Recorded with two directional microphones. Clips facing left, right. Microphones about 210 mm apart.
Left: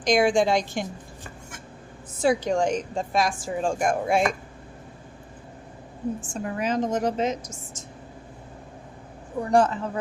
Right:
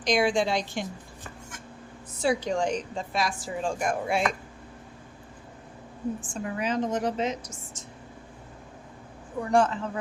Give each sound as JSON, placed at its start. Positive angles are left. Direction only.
{"t": 0.0, "sound": "a woman's voice", "side_deg": 50}
{"t": 2.2, "sound": "a woman's voice", "side_deg": 45}
{"t": 6.2, "sound": "a woman's voice", "side_deg": 45}
{"t": 9.5, "sound": "speech", "side_deg": 40}